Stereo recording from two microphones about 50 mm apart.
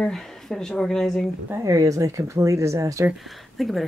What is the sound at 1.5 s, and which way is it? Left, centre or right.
Speech, right.